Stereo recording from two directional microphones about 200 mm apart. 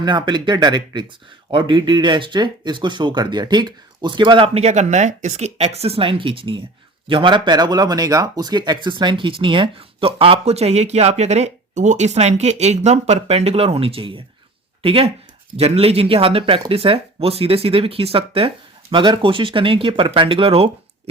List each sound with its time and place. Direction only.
0.0 s speech: 20° right (ahead or behind)